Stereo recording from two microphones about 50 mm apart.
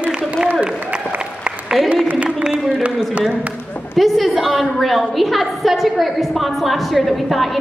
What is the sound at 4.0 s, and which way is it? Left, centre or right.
A woman's voice, centre.